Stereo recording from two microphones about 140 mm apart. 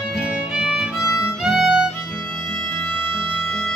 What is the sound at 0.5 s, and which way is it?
Music, 5° right (ahead or behind).